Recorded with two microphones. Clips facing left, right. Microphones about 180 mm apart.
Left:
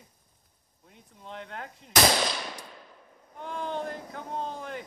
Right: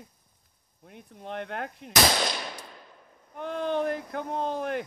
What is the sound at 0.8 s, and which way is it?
Speech, 65° right (ahead or behind).